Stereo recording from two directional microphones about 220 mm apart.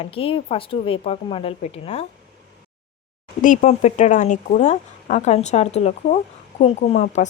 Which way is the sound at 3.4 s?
35° left (ahead or behind).